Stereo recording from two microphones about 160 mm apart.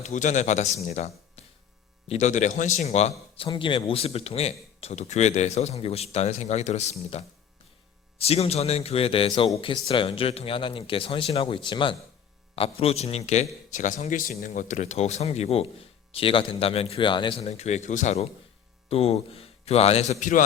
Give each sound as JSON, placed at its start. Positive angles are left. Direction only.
{"t": 0.0, "sound": "a man's voice", "side_deg": 50}